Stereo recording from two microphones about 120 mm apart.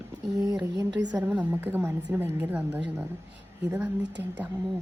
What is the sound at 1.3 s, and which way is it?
A woman's voice, 15° right (ahead or behind).